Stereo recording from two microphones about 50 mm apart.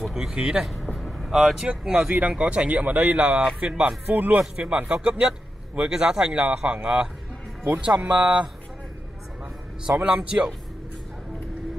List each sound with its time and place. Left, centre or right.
0.0 s speech: centre
1.7 s speech: right
3.8 s speech: right
4.4 s speech: right
10.0 s speech: centre